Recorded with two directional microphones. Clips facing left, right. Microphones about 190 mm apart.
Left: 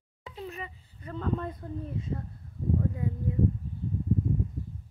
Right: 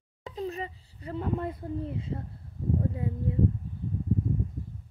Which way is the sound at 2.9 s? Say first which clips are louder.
Right 1 dB; 25° right (ahead or behind).